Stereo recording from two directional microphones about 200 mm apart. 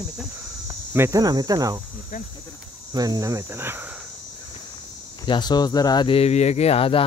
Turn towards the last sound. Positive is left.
turn(degrees=30)  # may be behind; listen again after turning